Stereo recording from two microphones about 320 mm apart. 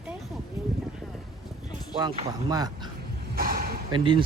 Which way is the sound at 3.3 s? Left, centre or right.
Right.